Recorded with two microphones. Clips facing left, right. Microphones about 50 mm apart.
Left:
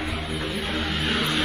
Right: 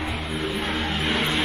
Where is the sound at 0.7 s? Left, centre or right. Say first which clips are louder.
Right 1 dB; right.